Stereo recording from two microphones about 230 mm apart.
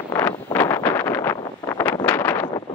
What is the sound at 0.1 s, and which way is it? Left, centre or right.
Wind noise, centre.